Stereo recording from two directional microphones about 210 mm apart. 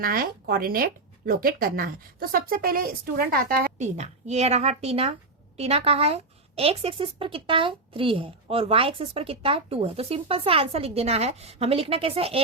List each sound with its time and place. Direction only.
0.0 s speech: 45° right (ahead or behind); by 12.4 s 30° right (ahead or behind)